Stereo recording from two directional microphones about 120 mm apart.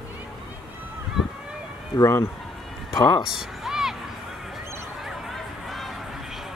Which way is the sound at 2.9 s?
35° left (ahead or behind).